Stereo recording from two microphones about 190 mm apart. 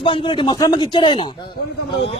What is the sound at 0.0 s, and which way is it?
A man's voice, 25° left (ahead or behind).